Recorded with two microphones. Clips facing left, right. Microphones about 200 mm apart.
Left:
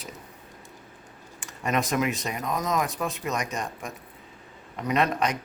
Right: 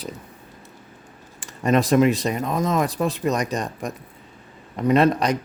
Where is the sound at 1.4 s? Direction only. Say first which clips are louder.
Right 8 dB; 35° right (ahead or behind).